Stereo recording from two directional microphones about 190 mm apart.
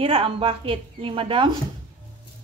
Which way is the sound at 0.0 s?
30° right (ahead or behind).